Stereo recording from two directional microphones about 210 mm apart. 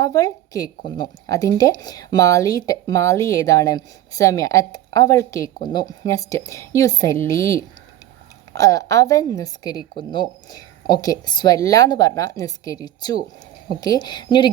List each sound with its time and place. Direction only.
0.0 s a woman's voice: 15° left (ahead or behind)